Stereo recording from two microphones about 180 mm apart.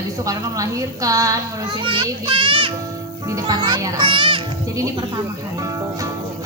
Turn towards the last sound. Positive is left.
turn(degrees=-20)  # may be behind; listen again after turning